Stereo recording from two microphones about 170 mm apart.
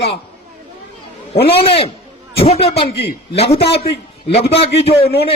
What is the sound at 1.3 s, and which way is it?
A man's voice, 35° left (ahead or behind).